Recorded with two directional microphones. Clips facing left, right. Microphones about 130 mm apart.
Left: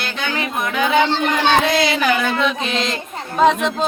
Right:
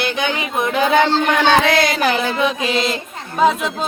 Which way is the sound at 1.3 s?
70° right (ahead or behind).